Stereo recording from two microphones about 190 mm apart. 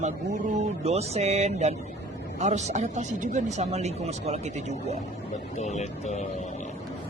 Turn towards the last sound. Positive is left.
turn(degrees=35)  # may be behind; listen again after turning